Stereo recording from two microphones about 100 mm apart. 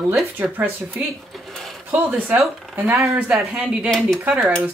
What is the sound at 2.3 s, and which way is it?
Speech, 15° right (ahead or behind).